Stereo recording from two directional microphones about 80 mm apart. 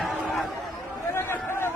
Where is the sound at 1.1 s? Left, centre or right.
Left.